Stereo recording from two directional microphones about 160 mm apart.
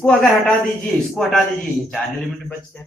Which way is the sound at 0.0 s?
5° left (ahead or behind).